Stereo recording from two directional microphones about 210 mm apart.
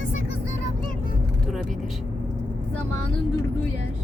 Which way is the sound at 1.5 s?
Centre (ahead or behind).